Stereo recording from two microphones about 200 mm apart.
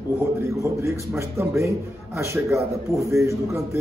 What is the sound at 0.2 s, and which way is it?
A man's voice, 15° right (ahead or behind).